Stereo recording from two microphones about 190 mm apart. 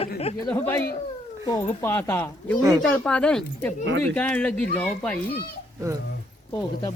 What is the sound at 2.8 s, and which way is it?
Speech, 5° left (ahead or behind).